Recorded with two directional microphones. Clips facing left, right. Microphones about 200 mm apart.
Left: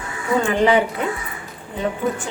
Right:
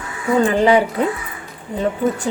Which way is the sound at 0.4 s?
35° right (ahead or behind).